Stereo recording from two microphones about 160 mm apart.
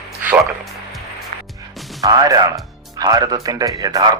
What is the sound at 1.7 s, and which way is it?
Music, centre (ahead or behind).